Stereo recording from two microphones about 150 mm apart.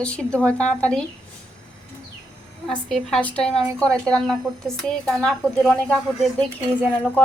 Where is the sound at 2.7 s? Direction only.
5° left (ahead or behind).